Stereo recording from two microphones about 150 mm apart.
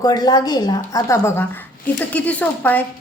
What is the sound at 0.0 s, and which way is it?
A woman's voice, 25° left (ahead or behind).